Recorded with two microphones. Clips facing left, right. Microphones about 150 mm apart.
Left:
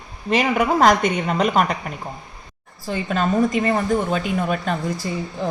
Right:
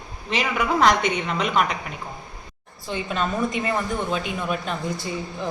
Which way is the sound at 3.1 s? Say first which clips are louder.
Left 6 dB; 40° left (ahead or behind).